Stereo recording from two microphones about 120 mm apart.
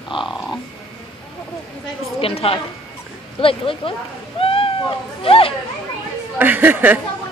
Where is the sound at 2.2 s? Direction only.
55° left (ahead or behind).